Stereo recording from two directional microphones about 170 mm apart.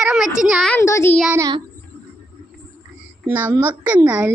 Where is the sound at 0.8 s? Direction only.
15° left (ahead or behind).